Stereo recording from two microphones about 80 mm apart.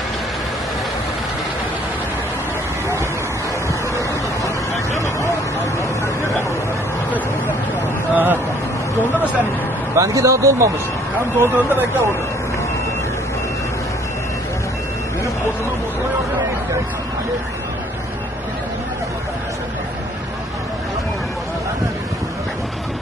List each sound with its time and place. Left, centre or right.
8.1 s a sound: right
9.9 s speech: right
11.3 s speech: right